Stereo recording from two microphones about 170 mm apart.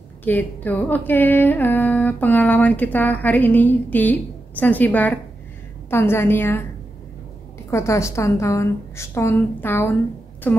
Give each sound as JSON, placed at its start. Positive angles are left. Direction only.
{"t": 0.2, "sound": "music", "side_deg": 10}
{"t": 7.7, "sound": "music", "side_deg": 15}